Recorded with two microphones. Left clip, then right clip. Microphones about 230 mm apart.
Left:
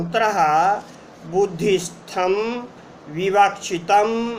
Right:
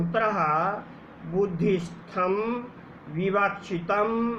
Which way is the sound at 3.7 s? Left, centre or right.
Left.